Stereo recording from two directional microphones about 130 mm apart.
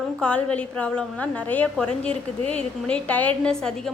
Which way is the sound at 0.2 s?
10° left (ahead or behind).